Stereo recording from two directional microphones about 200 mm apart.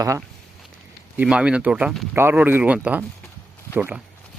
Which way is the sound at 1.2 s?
5° right (ahead or behind).